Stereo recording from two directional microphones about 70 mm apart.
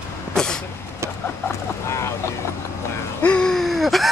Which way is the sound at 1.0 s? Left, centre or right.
Right.